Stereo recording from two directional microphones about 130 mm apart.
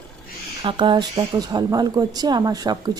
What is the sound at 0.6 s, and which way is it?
Speech, 40° right (ahead or behind).